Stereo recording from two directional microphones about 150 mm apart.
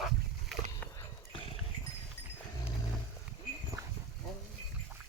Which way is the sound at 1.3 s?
40° left (ahead or behind).